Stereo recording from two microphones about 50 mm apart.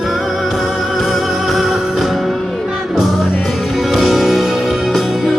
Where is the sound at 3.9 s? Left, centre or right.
Centre.